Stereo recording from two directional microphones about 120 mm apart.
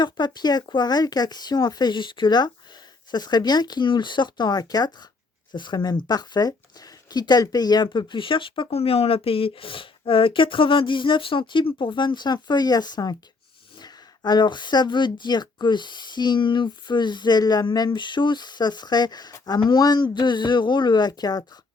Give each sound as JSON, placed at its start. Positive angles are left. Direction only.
{"t": 0.0, "sound": "speech", "side_deg": 35}